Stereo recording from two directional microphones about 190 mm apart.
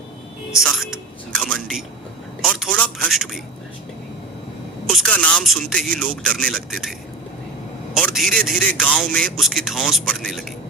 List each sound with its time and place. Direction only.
0.6 s music: centre (ahead or behind)
2.4 s speech: 5° left (ahead or behind)
4.9 s speech: 5° left (ahead or behind)
7.9 s speech: centre (ahead or behind)